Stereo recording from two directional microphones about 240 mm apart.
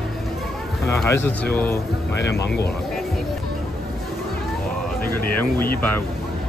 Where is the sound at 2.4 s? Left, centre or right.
Left.